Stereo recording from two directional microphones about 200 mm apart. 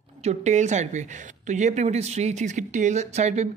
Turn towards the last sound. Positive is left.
turn(degrees=-35)  # may be behind; listen again after turning